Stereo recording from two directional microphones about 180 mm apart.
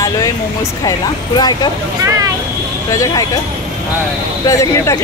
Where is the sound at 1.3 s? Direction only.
25° left (ahead or behind).